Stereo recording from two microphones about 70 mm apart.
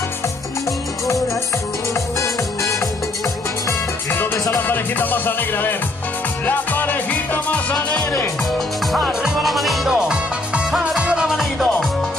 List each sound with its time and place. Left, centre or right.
4.1 s music: left; by 8.1 s centre
9.2 s music: centre